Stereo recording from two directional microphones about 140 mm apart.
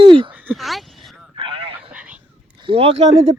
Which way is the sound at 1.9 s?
10° right (ahead or behind).